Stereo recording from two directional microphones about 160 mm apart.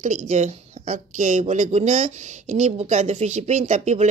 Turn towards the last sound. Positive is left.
turn(degrees=-45)  # may be behind; listen again after turning